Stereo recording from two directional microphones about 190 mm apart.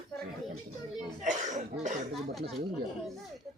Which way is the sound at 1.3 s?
40° right (ahead or behind).